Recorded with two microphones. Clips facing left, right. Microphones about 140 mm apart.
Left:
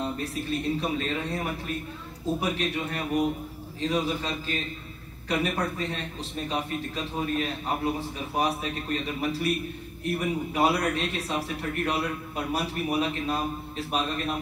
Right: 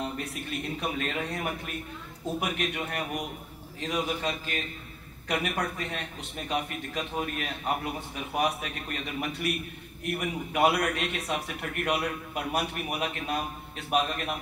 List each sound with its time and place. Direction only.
0.2 s a man's voice: 30° left (ahead or behind)